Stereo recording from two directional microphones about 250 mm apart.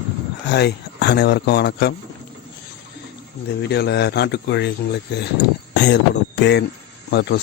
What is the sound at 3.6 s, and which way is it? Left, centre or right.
Speech, left.